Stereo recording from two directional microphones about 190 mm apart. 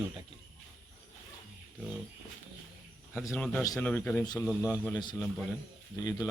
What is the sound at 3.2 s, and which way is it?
A man's voice, 15° left (ahead or behind).